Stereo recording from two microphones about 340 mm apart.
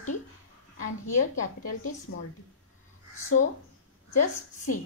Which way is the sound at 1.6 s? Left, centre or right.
Left.